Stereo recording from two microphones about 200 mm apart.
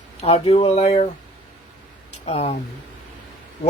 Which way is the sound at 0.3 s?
30° left (ahead or behind).